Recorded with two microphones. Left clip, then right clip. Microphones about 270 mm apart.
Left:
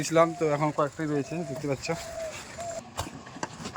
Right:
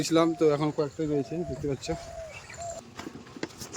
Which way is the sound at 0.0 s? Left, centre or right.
Centre.